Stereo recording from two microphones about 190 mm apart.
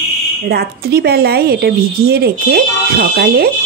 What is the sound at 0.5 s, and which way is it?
A woman's voice, 55° right (ahead or behind).